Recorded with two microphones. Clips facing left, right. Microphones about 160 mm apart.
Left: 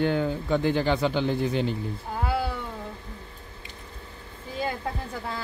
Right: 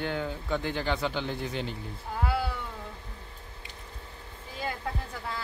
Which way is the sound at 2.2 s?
25° left (ahead or behind).